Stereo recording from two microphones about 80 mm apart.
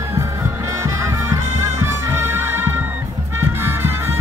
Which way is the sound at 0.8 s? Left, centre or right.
Right.